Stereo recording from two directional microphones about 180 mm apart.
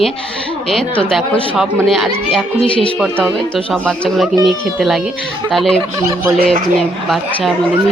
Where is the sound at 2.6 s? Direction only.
30° left (ahead or behind).